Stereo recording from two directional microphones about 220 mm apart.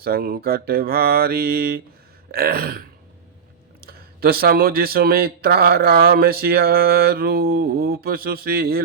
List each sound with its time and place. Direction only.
0.0 s speech: 45° right (ahead or behind)
3.8 s speech: 45° right (ahead or behind)